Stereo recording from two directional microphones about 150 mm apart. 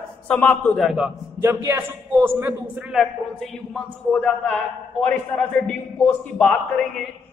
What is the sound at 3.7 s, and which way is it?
A man's voice, 5° left (ahead or behind).